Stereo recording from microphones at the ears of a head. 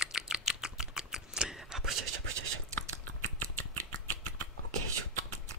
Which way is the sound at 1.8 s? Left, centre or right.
Right.